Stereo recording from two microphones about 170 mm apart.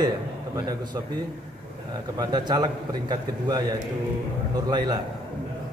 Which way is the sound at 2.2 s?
25° right (ahead or behind).